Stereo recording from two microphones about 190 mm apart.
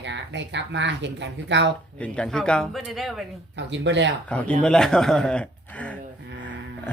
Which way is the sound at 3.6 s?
70° right (ahead or behind).